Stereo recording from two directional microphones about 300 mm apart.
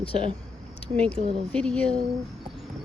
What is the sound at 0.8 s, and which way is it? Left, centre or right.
Speech, centre.